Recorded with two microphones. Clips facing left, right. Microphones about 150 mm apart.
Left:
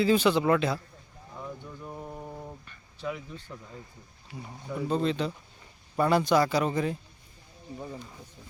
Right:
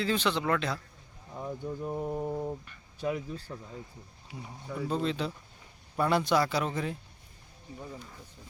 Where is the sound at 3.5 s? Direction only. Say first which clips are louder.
Right 2 dB; 15° right (ahead or behind).